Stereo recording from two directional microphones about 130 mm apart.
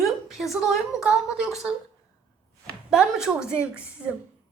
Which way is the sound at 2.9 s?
5° right (ahead or behind).